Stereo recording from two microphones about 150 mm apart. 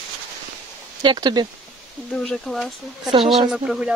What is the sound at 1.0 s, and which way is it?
Speech, 30° right (ahead or behind).